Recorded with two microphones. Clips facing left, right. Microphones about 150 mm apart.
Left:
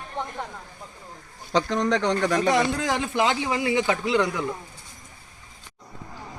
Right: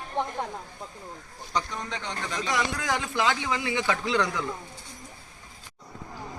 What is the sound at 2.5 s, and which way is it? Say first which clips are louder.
A man's voice: left 6 dB; 30° left (ahead or behind).